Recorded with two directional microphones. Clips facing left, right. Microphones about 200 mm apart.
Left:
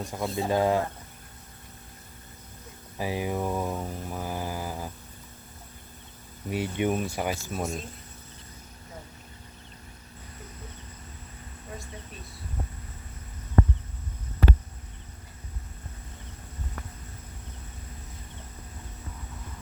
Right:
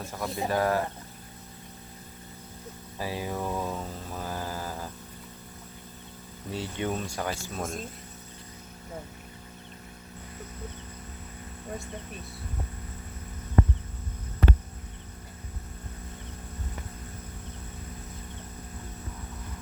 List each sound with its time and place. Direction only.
0.0 s speech: 15° left (ahead or behind)
3.0 s mantra: 15° left (ahead or behind)
6.5 s speech: 15° left (ahead or behind)